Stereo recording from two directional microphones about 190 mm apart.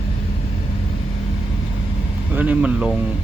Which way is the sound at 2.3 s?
5° right (ahead or behind).